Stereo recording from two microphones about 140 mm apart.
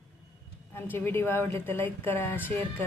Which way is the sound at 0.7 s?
15° left (ahead or behind).